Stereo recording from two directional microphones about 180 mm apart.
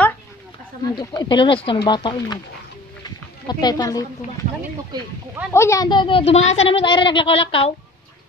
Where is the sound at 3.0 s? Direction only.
20° left (ahead or behind).